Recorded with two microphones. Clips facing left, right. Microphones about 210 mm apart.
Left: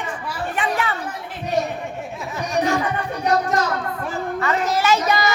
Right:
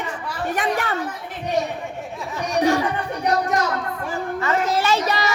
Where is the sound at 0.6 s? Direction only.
40° right (ahead or behind).